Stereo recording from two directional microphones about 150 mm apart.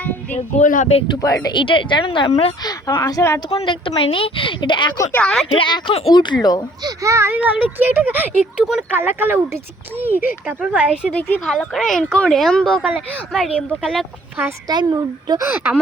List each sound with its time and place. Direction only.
0.5 s speech: 55° left (ahead or behind)
1.2 s a woman's voice: 25° left (ahead or behind)
2.6 s speech: 25° left (ahead or behind)
3.5 s a woman's voice: 35° left (ahead or behind)
5.1 s speech: 5° left (ahead or behind)
5.5 s a woman's voice: 30° left (ahead or behind)
6.8 s speech: 20° right (ahead or behind)
11.1 s speech: 10° left (ahead or behind)
14.7 s a woman's voice: 30° right (ahead or behind)